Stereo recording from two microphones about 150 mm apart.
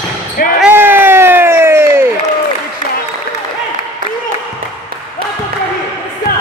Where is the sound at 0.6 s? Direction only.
10° right (ahead or behind).